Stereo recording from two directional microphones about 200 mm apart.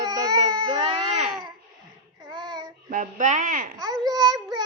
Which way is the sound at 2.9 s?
40° right (ahead or behind).